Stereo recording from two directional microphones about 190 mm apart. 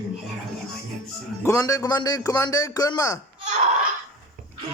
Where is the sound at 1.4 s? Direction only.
15° left (ahead or behind).